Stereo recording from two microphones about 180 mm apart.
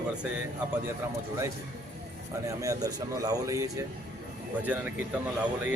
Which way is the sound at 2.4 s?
15° right (ahead or behind).